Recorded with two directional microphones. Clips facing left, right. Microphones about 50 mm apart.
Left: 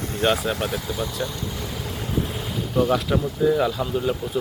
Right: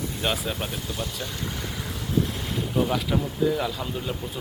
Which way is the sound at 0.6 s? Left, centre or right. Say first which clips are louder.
Left 6 dB; centre.